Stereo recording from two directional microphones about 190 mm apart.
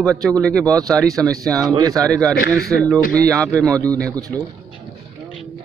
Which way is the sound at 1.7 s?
20° right (ahead or behind).